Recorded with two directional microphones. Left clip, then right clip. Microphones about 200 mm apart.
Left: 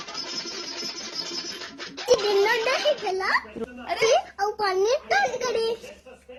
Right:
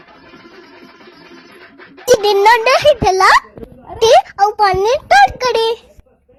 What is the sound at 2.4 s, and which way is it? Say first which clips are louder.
A child's voice: right 13 dB; 50° right (ahead or behind).